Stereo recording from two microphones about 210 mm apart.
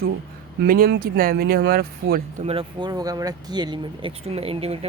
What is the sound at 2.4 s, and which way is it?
Speech, 25° right (ahead or behind).